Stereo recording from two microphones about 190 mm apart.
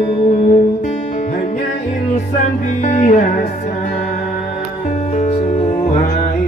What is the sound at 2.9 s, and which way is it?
Music, 40° left (ahead or behind).